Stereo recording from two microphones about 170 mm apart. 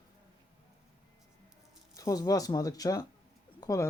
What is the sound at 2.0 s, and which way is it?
Speech, 20° left (ahead or behind).